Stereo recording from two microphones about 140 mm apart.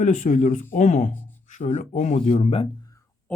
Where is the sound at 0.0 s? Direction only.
65° left (ahead or behind); by 2.6 s 50° left (ahead or behind).